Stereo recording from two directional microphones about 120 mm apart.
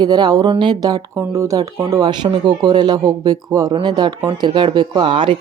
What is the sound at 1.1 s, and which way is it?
Speech, 25° right (ahead or behind).